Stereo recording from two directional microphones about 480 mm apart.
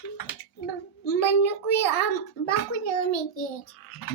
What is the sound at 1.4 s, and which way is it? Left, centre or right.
A child's voice, left.